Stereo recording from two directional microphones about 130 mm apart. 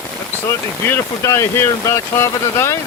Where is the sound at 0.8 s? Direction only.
20° left (ahead or behind).